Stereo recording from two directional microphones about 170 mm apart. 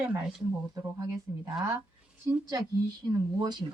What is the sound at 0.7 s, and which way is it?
Speech, 20° right (ahead or behind).